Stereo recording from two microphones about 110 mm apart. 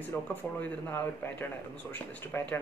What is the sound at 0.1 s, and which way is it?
Speech, 20° left (ahead or behind).